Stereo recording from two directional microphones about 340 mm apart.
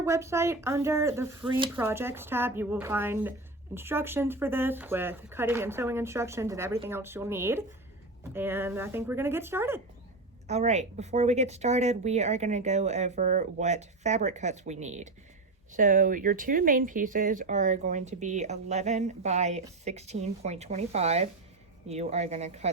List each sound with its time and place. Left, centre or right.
0.0 s speech: centre
10.4 s speech: centre